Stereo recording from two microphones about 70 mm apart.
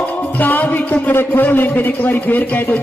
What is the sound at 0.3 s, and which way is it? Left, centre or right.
Speech, left.